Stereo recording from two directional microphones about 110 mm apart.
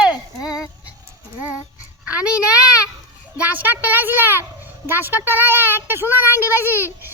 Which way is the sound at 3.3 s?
15° right (ahead or behind).